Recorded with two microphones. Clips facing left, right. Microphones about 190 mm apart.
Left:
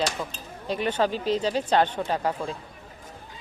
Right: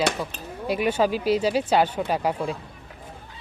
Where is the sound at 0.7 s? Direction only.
10° right (ahead or behind).